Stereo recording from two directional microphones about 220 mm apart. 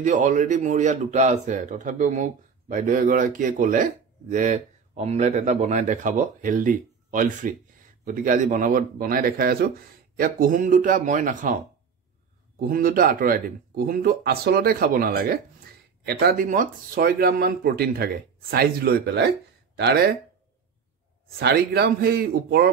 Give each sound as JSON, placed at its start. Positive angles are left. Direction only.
{"t": 0.0, "sound": "a man's voice", "side_deg": -35}
{"t": 12.5, "sound": "a man's voice", "side_deg": -40}
{"t": 21.4, "sound": "speech", "side_deg": -45}